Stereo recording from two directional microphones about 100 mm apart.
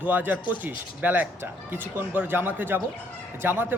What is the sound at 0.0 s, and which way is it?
Speech, 15° right (ahead or behind).